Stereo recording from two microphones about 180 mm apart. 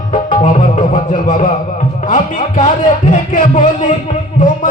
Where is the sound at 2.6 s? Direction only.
45° left (ahead or behind).